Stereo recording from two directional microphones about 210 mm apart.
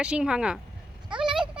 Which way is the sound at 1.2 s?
5° right (ahead or behind).